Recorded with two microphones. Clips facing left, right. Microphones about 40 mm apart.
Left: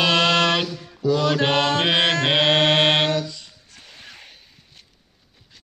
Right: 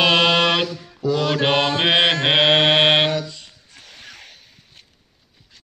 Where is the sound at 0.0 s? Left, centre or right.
Centre.